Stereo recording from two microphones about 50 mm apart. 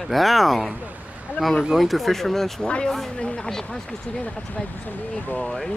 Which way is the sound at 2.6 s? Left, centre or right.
Centre.